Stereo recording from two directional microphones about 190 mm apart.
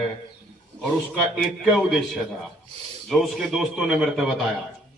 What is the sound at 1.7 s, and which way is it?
A man's voice, centre (ahead or behind).